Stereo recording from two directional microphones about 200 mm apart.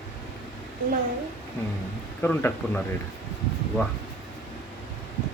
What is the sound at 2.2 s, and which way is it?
Speech, 10° left (ahead or behind).